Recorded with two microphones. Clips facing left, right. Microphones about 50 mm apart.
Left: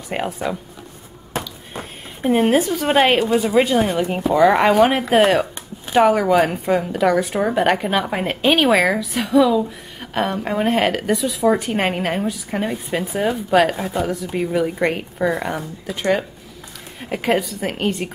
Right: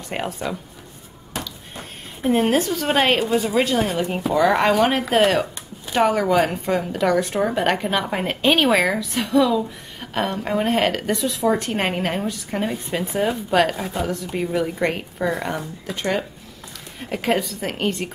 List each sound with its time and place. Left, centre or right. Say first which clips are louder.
0.1 s a woman's voice: left 3 dB; centre